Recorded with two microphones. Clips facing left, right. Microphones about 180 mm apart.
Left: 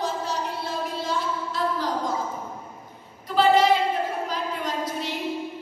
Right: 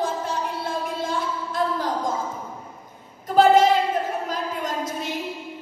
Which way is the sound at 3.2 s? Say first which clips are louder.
Right 3 dB; 45° right (ahead or behind).